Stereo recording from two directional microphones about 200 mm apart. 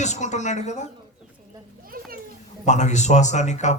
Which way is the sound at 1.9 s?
45° right (ahead or behind).